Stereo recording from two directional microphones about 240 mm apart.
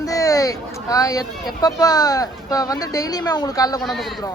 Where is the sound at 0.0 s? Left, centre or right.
Centre.